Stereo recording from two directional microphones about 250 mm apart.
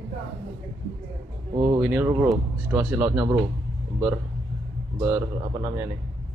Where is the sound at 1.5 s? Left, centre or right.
Centre.